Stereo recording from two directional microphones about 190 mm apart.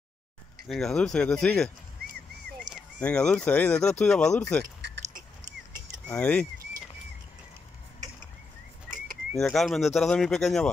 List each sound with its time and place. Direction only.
0.7 s speech: 5° left (ahead or behind)
2.7 s speech: 5° left (ahead or behind)
5.0 s dog: 40° right (ahead or behind)
6.0 s speech: 5° left (ahead or behind)
9.4 s speech: centre (ahead or behind)